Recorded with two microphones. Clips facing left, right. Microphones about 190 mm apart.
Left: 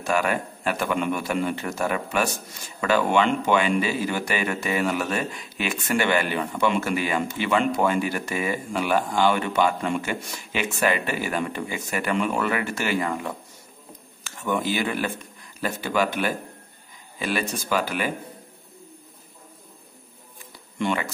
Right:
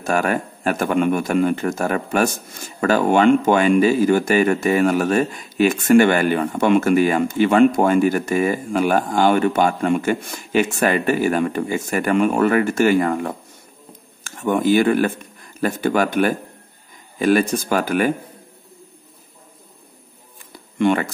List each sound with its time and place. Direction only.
0.0 s a man's voice: 45° right (ahead or behind)
20.8 s a man's voice: 50° right (ahead or behind)